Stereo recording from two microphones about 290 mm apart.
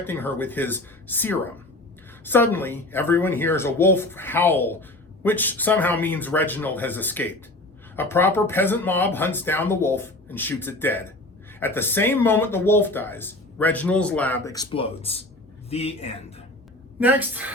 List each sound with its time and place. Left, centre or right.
0.0 s a woman's voice: centre
17.0 s a woman's voice: centre